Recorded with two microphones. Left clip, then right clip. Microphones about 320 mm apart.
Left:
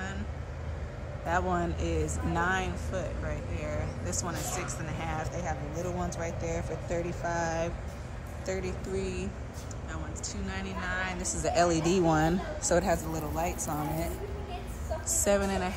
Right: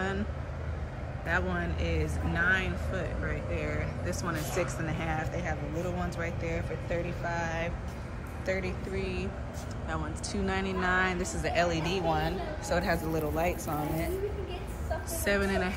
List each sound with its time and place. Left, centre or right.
1.2 s speech: centre
9.8 s speech: centre
11.4 s speech: centre
15.0 s speech: centre